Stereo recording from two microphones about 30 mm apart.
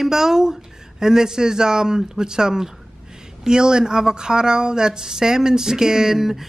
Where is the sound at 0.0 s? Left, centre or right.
Centre.